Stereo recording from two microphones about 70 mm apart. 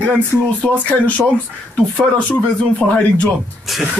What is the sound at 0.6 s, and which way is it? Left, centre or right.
Speech, left.